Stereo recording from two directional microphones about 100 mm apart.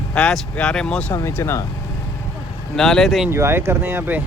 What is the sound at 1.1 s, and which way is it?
Speech, 25° left (ahead or behind).